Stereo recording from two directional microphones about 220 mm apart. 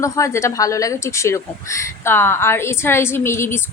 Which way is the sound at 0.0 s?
15° left (ahead or behind).